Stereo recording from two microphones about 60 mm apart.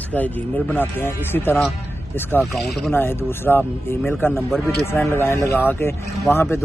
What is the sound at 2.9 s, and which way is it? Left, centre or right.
Speech, left.